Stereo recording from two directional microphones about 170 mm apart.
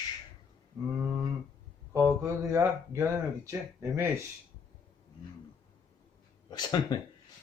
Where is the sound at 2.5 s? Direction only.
15° right (ahead or behind).